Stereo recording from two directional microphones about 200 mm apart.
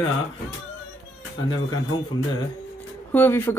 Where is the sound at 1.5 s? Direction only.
20° left (ahead or behind).